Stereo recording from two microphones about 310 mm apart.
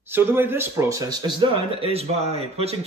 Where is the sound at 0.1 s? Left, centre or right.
Centre.